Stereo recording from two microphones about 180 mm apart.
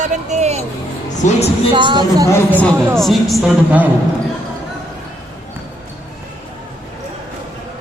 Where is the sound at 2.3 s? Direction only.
10° left (ahead or behind); by 3.9 s 5° right (ahead or behind).